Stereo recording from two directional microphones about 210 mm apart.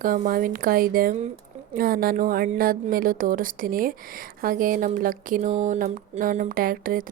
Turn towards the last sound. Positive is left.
turn(degrees=-40)  # may be behind; listen again after turning